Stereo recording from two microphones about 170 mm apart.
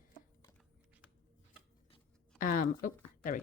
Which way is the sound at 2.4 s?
55° left (ahead or behind).